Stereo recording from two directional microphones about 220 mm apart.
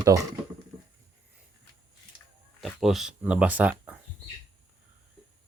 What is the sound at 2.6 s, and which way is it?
Speech, centre (ahead or behind).